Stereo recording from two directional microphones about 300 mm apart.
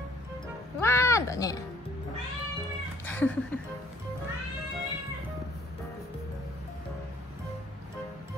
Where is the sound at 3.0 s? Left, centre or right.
Centre.